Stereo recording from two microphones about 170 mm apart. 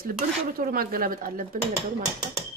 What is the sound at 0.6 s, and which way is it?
Speech, 60° right (ahead or behind).